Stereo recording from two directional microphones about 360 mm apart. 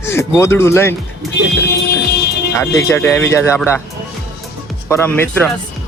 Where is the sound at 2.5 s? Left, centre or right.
Centre.